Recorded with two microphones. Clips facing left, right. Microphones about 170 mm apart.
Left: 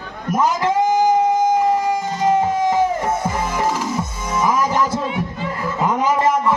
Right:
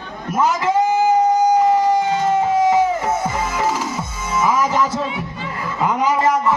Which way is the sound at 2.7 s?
10° right (ahead or behind).